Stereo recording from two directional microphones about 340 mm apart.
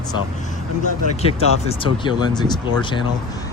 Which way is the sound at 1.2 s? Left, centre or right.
Centre.